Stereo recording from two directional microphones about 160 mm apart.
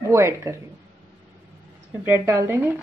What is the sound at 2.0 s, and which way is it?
Speech, 15° right (ahead or behind).